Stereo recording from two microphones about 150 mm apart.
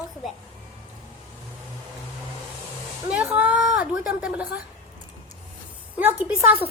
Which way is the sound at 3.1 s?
10° right (ahead or behind).